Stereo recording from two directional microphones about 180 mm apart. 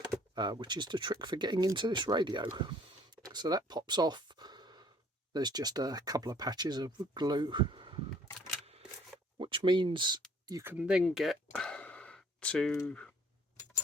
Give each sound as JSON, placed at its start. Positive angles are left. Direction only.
{"t": 0.3, "sound": "speech", "side_deg": -25}
{"t": 3.2, "sound": "gasp", "side_deg": -20}
{"t": 5.3, "sound": "speech", "side_deg": -25}
{"t": 9.4, "sound": "speech", "side_deg": -30}
{"t": 10.4, "sound": "a sound", "side_deg": -15}
{"t": 12.7, "sound": "speech", "side_deg": 10}